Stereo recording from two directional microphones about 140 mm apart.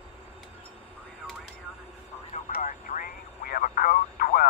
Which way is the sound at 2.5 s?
75° left (ahead or behind).